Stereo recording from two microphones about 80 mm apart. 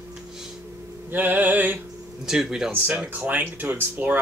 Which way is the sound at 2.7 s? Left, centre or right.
Centre.